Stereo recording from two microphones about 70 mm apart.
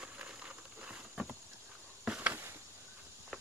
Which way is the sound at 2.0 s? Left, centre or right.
Centre.